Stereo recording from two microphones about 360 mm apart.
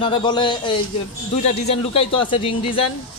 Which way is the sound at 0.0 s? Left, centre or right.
Centre.